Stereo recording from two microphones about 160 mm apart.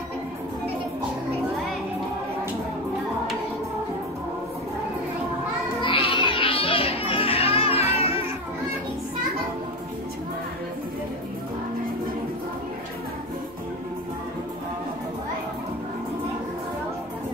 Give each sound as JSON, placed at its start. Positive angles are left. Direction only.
{"t": 5.8, "sound": "music", "side_deg": 35}